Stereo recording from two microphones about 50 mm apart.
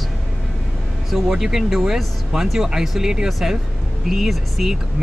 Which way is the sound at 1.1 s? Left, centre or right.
Centre.